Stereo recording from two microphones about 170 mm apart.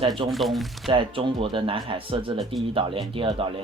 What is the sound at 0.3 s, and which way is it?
Speech, centre (ahead or behind).